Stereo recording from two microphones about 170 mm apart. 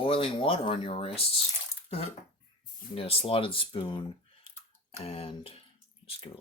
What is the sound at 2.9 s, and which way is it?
Speech, 35° left (ahead or behind).